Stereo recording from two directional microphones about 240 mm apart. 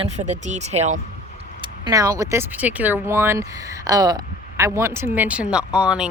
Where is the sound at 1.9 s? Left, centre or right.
Centre.